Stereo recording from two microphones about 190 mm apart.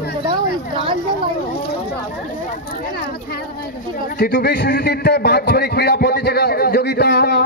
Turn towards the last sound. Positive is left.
turn(degrees=60)  # may be behind; listen again after turning